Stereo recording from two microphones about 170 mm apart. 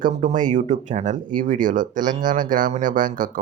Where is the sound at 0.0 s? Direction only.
45° right (ahead or behind).